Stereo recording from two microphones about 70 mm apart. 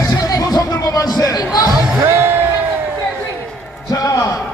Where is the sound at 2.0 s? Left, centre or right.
Right.